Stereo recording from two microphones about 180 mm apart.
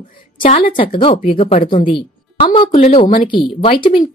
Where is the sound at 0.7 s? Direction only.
30° left (ahead or behind).